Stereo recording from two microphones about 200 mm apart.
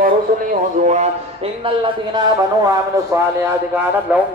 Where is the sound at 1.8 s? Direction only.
20° right (ahead or behind).